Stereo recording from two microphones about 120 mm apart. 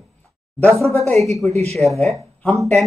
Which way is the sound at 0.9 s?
60° right (ahead or behind).